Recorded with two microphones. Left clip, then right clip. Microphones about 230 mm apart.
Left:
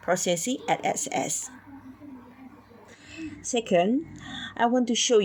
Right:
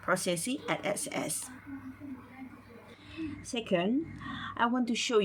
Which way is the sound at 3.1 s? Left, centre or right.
Left.